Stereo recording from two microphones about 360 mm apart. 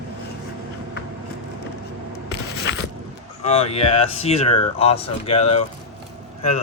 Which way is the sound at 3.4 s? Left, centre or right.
Centre.